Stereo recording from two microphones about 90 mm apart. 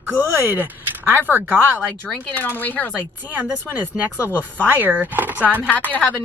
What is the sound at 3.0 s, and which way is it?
A woman's voice, 20° right (ahead or behind).